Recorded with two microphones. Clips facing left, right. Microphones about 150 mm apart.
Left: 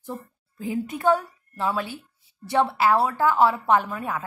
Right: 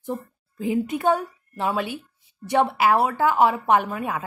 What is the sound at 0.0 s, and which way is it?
A woman's voice, 20° right (ahead or behind).